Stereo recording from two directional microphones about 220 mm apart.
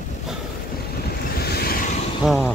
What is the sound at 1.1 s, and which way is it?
Vehicle, 45° left (ahead or behind).